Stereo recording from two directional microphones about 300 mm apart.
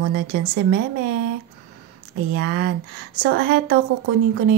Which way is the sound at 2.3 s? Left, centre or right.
Right.